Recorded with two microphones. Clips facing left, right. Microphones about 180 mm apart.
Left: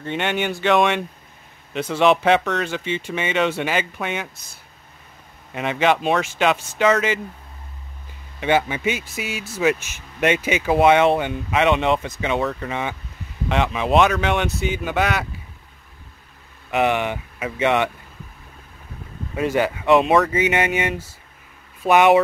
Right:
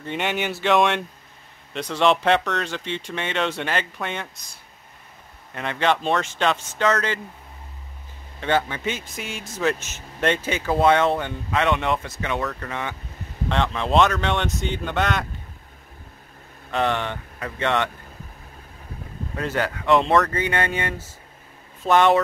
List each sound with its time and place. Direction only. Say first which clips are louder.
0.0 s speech: left 2 dB; centre (ahead or behind)
5.5 s speech: left 3 dB; 15° left (ahead or behind)
8.4 s speech: left 3 dB; 15° left (ahead or behind)
16.7 s speech: left 4 dB; 15° left (ahead or behind)
19.3 s speech: left 5 dB; 15° left (ahead or behind)